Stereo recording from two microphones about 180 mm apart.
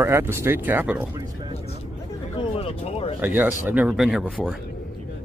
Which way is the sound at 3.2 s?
10° right (ahead or behind).